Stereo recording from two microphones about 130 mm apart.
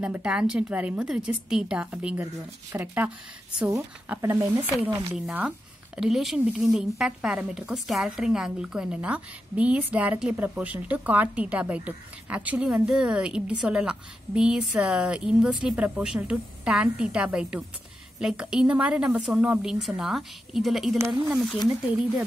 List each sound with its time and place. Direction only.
0.0 s speech: 10° right (ahead or behind)
5.1 s a woman's voice: 10° right (ahead or behind)